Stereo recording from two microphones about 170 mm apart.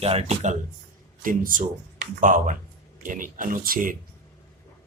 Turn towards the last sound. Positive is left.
turn(degrees=-55)  # may be behind; listen again after turning